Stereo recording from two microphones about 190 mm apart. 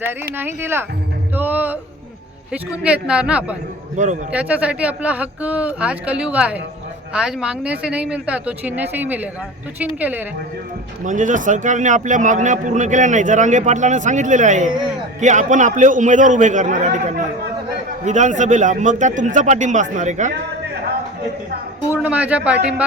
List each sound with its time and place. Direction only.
0.0 s speech: 10° right (ahead or behind)
1.4 s music: 10° right (ahead or behind)
2.5 s speech: 5° right (ahead or behind)
3.9 s a man's voice: 40° right (ahead or behind)
4.3 s speech: 5° right (ahead or behind)
11.0 s a man's voice: 40° right (ahead or behind)
22.0 s speech: 5° right (ahead or behind)